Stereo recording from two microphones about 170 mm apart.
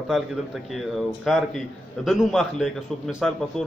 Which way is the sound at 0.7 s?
Centre (ahead or behind).